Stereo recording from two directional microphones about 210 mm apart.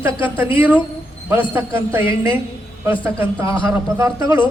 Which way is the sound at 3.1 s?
15° right (ahead or behind).